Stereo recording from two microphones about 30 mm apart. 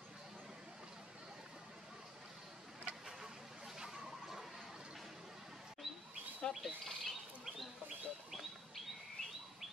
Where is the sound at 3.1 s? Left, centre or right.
Centre.